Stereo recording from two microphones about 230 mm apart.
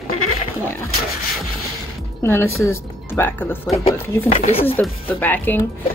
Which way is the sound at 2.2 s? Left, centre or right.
Centre.